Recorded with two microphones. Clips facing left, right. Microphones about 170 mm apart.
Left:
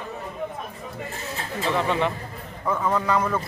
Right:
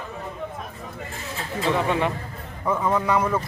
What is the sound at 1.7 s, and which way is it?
Speech, 10° right (ahead or behind).